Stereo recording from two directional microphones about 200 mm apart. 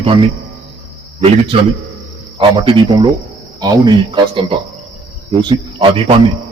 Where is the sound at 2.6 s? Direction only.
25° right (ahead or behind).